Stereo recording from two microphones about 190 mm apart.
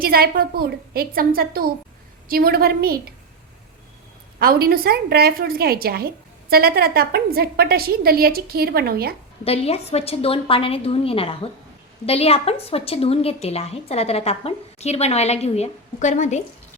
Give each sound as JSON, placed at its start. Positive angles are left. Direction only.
{"t": 0.0, "sound": "a woman's voice", "side_deg": -50}
{"t": 4.4, "sound": "a woman's voice", "side_deg": -50}
{"t": 9.4, "sound": "a woman's voice", "side_deg": 30}